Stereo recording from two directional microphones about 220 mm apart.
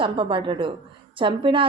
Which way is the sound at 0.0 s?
25° right (ahead or behind).